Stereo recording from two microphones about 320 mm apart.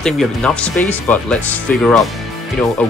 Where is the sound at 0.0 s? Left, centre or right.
Centre.